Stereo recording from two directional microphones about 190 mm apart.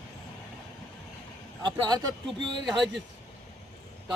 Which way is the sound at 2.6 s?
Centre (ahead or behind).